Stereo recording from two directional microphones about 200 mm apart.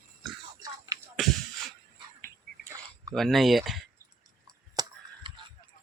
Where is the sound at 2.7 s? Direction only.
15° right (ahead or behind).